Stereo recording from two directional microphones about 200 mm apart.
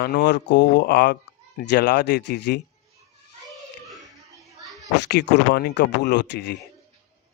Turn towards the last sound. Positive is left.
turn(degrees=60)  # may be behind; listen again after turning